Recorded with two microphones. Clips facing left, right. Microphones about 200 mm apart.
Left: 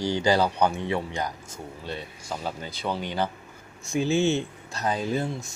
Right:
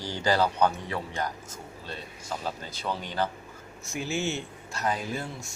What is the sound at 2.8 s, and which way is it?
Speech, 10° left (ahead or behind).